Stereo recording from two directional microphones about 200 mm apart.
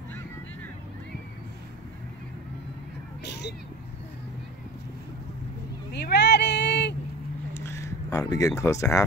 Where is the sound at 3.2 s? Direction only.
60° left (ahead or behind).